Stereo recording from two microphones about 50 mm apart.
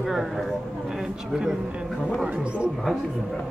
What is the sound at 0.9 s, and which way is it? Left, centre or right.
Speech, centre.